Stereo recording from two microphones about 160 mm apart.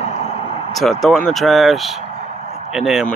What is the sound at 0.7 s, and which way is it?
Speech, centre (ahead or behind).